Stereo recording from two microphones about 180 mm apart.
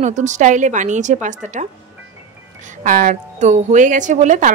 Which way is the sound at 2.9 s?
50° right (ahead or behind).